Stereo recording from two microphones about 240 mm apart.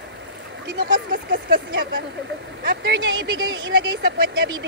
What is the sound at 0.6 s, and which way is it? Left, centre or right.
Speech, right.